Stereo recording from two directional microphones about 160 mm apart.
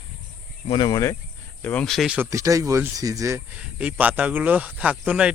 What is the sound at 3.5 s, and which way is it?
Speech, 10° right (ahead or behind).